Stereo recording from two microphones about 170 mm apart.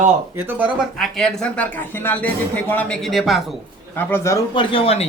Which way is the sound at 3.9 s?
15° left (ahead or behind).